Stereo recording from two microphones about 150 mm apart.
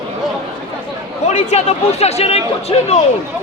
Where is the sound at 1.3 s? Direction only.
50° left (ahead or behind).